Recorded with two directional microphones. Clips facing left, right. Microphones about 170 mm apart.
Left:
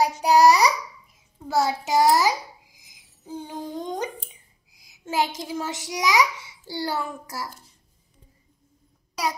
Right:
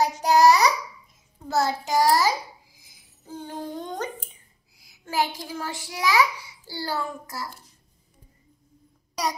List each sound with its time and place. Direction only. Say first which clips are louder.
0.0 s babbling: left 1 dB; 15° left (ahead or behind)
1.5 s child singing: left 1 dB; 10° left (ahead or behind)
2.0 s a child's voice: left 1 dB; 20° left (ahead or behind)
2.8 s a sound: left 3 dB; 15° left (ahead or behind)
4.7 s a child's voice: left 1 dB; 20° left (ahead or behind)